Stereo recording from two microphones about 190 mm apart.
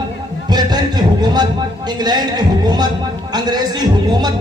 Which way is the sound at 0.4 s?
20° right (ahead or behind).